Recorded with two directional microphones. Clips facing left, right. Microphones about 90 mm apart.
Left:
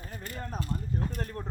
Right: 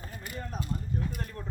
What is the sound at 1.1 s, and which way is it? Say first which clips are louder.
Speech: left 3 dB; 40° left (ahead or behind).